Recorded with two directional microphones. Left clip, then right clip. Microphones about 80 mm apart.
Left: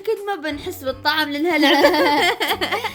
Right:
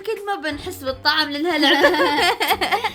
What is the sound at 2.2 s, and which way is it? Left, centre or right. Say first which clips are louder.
Speech: right 1 dB; right.